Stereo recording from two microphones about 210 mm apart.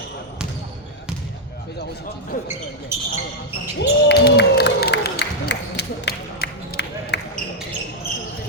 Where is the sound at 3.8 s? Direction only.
50° left (ahead or behind).